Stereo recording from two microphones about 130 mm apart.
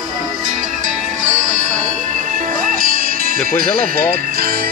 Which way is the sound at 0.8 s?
75° right (ahead or behind).